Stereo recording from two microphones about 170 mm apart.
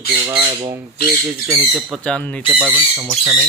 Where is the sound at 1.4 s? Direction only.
Centre (ahead or behind).